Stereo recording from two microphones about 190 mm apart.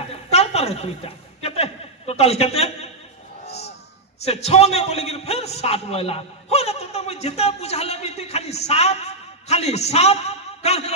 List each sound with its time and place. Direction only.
0.1 s chuckle: 35° left (ahead or behind)
3.4 s a sound: 35° left (ahead or behind)
4.2 s a man's voice: 35° left (ahead or behind)